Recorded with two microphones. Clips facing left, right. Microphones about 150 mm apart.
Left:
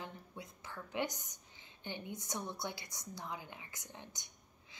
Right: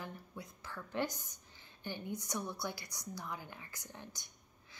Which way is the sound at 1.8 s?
20° left (ahead or behind).